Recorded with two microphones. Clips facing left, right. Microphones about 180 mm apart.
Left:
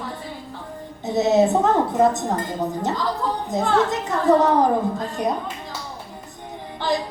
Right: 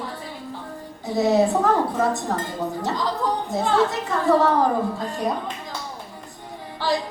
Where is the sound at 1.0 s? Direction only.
20° left (ahead or behind).